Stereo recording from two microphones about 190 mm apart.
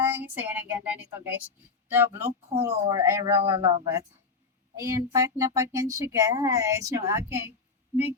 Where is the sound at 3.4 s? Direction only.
30° right (ahead or behind).